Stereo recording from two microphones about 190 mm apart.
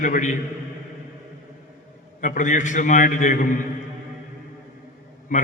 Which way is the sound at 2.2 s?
40° left (ahead or behind).